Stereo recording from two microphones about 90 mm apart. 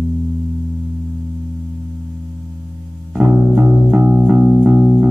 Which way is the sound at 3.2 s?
10° right (ahead or behind).